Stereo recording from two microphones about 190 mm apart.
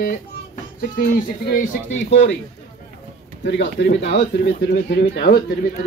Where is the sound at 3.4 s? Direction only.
65° left (ahead or behind).